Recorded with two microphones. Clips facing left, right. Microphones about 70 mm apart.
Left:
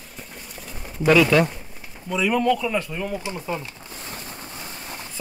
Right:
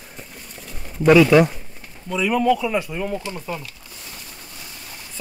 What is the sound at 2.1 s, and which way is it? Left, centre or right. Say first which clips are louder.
A man's voice: right 2 dB; centre.